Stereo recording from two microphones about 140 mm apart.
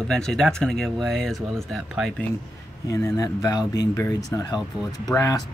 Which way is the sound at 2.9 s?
25° left (ahead or behind).